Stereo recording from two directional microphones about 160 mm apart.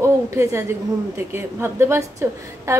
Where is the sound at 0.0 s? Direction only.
20° right (ahead or behind).